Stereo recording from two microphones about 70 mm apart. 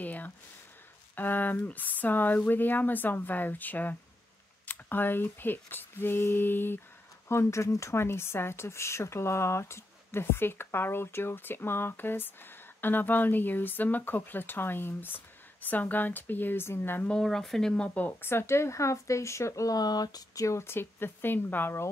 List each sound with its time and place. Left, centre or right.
0.0 s a sound: left
1.1 s speech: left
7.2 s speech: left
17.2 s speech: centre
18.2 s speech: left
20.4 s speech: left